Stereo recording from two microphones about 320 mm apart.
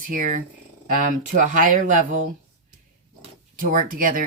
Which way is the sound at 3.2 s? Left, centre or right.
Right.